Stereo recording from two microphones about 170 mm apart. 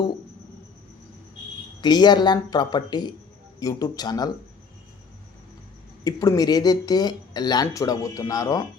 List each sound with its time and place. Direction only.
1.8 s speech: 25° left (ahead or behind)
6.1 s speech: 20° left (ahead or behind)